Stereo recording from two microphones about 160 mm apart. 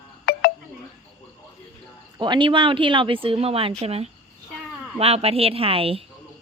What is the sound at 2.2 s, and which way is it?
Speech, 30° right (ahead or behind).